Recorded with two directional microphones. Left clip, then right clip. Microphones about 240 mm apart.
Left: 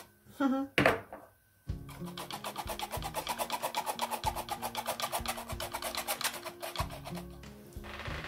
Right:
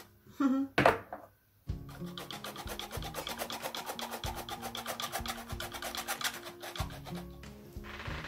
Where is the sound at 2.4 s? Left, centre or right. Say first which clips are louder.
Left 3 dB; centre.